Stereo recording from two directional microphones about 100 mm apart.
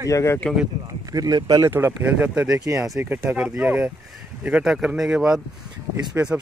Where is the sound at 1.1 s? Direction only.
40° right (ahead or behind).